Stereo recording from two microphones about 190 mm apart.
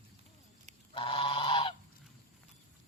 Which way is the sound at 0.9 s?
30° left (ahead or behind).